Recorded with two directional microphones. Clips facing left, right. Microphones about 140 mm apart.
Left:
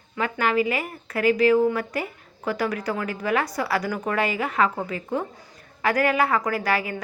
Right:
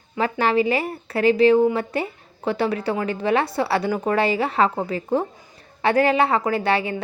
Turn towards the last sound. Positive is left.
turn(degrees=-25)  # may be behind; listen again after turning